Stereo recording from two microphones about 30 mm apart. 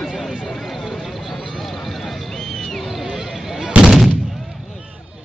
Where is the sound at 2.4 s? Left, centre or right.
Centre.